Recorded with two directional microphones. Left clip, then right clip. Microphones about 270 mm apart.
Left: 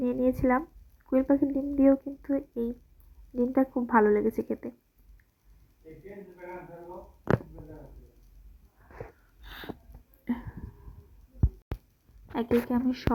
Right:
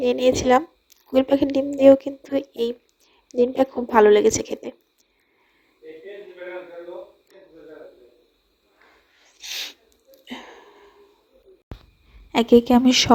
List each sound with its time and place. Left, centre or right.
0.0 s a woman's voice: right
12.3 s a woman's voice: right